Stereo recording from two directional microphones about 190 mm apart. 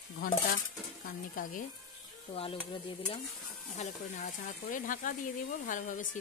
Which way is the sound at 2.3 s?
30° left (ahead or behind).